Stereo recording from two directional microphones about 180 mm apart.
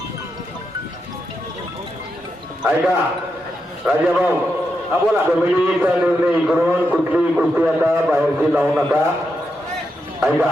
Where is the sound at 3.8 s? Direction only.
5° right (ahead or behind).